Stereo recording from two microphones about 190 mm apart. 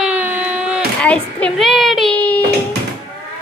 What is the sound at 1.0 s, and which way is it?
A child's voice, 5° left (ahead or behind).